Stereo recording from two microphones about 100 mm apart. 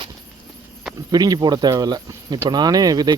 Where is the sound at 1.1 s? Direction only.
40° right (ahead or behind).